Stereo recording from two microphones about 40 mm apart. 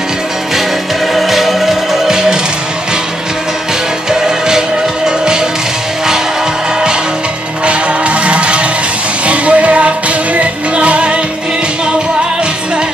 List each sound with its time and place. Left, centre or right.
1.1 s music: centre
4.1 s music: centre
7.6 s music: right